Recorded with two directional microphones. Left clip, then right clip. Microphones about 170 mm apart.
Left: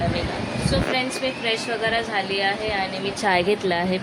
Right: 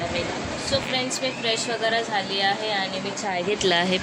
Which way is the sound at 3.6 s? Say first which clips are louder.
Right 2 dB; 5° left (ahead or behind).